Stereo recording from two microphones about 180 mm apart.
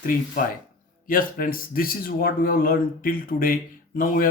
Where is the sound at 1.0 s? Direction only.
50° left (ahead or behind).